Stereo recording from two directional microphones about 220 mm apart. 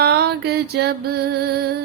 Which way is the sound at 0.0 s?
45° right (ahead or behind).